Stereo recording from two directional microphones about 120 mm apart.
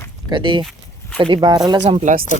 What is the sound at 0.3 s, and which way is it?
Speech, 40° right (ahead or behind).